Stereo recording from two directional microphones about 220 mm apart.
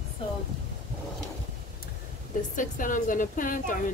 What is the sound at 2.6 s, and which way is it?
A woman's voice, 35° left (ahead or behind).